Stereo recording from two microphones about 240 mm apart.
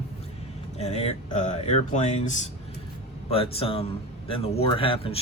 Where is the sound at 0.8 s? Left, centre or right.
Left.